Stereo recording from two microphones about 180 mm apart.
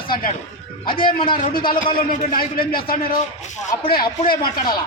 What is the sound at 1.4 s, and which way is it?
A man's voice, 45° left (ahead or behind).